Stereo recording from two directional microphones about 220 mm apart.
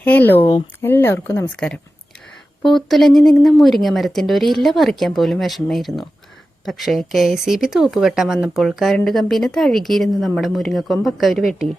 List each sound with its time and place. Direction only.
0.0 s speech: 5° left (ahead or behind)